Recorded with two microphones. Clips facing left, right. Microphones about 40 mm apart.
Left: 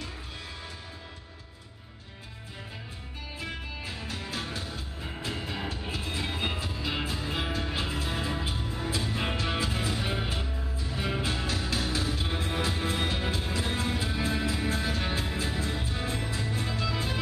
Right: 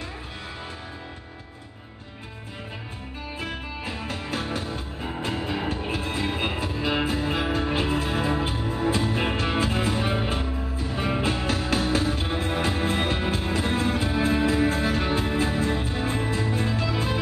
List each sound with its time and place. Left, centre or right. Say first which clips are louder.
3.3 s music: right 4 dB; right
5.3 s music: right 7 dB; right